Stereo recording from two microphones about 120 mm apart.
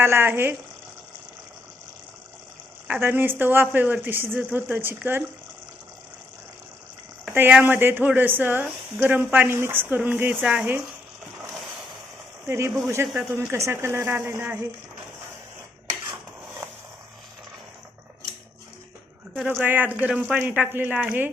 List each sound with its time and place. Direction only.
0.0 s speech: 20° right (ahead or behind)
2.8 s a woman's voice: 15° right (ahead or behind)
7.3 s a woman's voice: 15° right (ahead or behind)
10.4 s speech: 5° right (ahead or behind)
12.5 s speech: 25° right (ahead or behind)
19.5 s a woman's voice: 15° right (ahead or behind)